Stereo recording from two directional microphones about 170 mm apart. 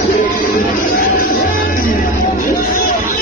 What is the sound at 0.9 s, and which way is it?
Music, 55° left (ahead or behind).